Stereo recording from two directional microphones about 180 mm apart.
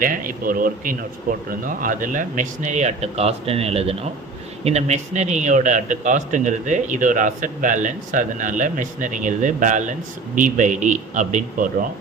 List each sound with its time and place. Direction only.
0.0 s a man's voice: 50° right (ahead or behind)